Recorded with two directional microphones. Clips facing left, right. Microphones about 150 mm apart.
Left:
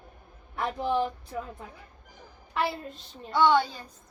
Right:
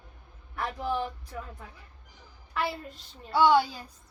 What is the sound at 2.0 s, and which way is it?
Music, 50° left (ahead or behind).